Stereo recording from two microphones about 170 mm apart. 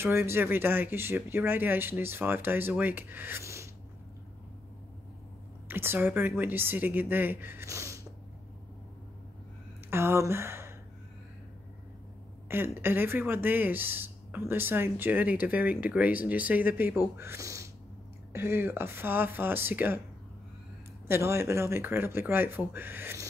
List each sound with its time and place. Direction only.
0.0 s speech: 15° right (ahead or behind)
5.7 s speech: 10° right (ahead or behind)
9.8 s speech: 15° right (ahead or behind)
12.4 s speech: 15° right (ahead or behind)
21.1 s speech: 15° right (ahead or behind)